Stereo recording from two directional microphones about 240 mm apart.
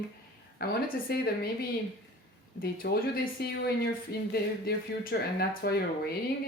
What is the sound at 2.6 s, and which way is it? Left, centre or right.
Speech, left.